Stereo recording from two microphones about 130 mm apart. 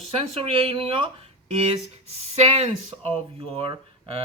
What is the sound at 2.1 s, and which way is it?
Speech, 55° right (ahead or behind).